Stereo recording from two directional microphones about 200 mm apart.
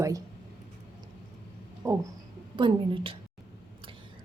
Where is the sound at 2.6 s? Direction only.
25° right (ahead or behind).